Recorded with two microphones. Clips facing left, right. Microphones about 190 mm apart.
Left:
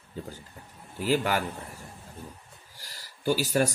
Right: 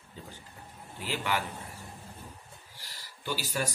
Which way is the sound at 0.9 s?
40° left (ahead or behind).